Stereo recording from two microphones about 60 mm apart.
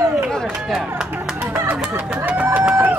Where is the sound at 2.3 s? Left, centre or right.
Right.